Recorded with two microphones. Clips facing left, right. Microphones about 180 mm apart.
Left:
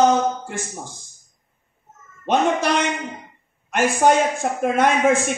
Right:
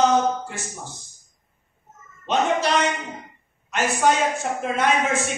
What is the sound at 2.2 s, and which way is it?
Speech, 55° left (ahead or behind).